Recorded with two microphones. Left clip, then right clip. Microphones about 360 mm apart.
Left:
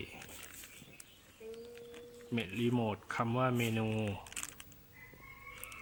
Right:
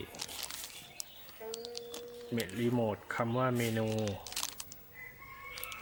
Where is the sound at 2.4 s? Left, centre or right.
Centre.